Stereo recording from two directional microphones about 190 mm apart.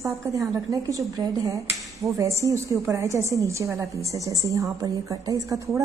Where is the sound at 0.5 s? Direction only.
15° right (ahead or behind).